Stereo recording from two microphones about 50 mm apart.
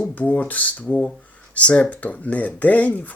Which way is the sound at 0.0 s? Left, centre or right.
Left.